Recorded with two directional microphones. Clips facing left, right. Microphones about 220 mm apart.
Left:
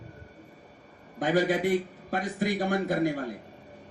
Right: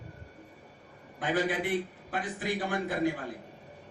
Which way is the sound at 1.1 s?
40° left (ahead or behind).